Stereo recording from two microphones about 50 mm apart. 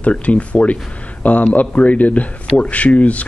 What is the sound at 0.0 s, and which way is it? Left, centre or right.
Speech, left.